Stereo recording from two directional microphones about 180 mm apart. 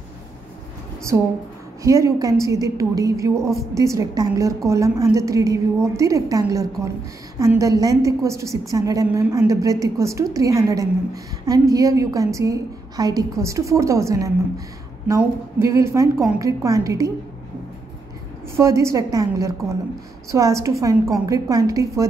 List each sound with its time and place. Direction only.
1.1 s a woman's voice: 15° right (ahead or behind)
18.6 s a woman's voice: 15° right (ahead or behind)